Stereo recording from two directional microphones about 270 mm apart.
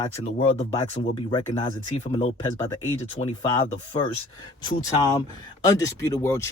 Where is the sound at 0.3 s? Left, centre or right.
Left.